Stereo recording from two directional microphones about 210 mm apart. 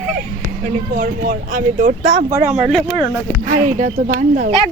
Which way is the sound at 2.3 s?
15° right (ahead or behind).